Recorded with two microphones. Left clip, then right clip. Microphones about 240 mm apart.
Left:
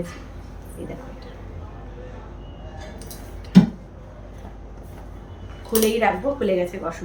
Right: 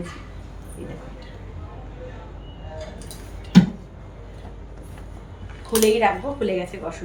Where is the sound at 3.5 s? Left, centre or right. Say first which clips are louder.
Even; centre.